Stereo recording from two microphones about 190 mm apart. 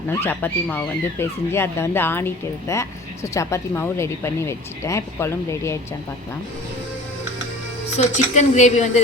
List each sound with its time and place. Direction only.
0.1 s speech: 10° left (ahead or behind)
7.9 s a woman's voice: 35° left (ahead or behind)